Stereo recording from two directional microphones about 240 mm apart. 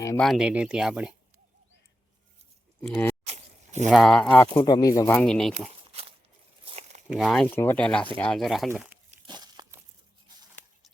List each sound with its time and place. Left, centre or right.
0.2 s speech: centre
2.8 s speech: centre
3.2 s a sound: right
3.8 s speech: centre
4.6 s speech: centre
5.9 s pig: right
6.7 s a sound: right
7.1 s speech: centre
9.0 s a sound: centre